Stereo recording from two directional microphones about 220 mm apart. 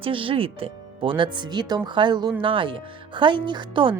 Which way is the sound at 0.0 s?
25° right (ahead or behind).